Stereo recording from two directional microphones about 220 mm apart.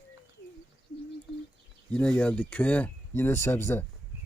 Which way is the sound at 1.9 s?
5° left (ahead or behind).